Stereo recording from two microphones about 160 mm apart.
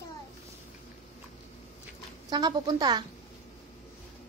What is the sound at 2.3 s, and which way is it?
Speech, 25° right (ahead or behind).